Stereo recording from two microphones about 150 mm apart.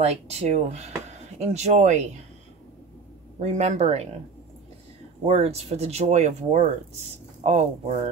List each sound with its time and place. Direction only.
0.0 s speech: 45° right (ahead or behind)
3.3 s speech: 50° right (ahead or behind)
5.2 s speech: 45° right (ahead or behind)